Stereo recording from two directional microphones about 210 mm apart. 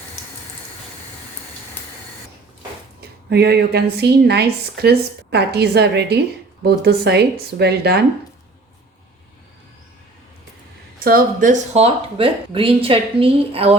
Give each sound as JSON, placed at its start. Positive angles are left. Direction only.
{"t": 3.2, "sound": "a woman's voice", "side_deg": -50}
{"t": 11.0, "sound": "speech", "side_deg": -40}